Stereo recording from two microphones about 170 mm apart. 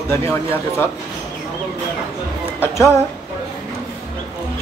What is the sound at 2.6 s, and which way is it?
Speech, 15° left (ahead or behind).